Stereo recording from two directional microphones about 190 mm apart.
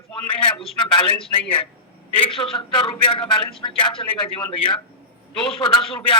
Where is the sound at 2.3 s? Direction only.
30° left (ahead or behind).